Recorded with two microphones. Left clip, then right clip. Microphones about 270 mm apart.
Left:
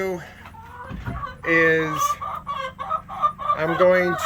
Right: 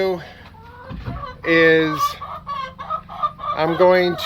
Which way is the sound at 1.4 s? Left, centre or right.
Centre.